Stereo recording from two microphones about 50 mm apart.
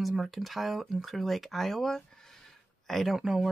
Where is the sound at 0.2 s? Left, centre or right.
Centre.